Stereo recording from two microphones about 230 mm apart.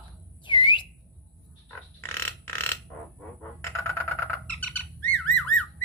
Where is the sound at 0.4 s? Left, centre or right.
Centre.